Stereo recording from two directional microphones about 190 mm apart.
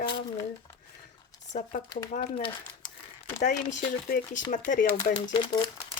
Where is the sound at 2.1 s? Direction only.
40° left (ahead or behind).